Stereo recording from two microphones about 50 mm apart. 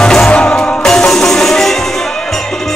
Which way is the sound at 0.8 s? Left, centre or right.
Centre.